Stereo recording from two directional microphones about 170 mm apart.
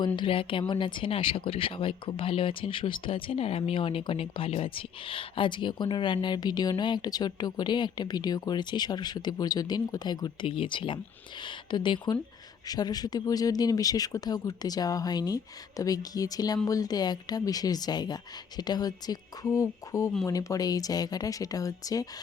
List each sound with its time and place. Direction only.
0.2 s speech: 30° left (ahead or behind)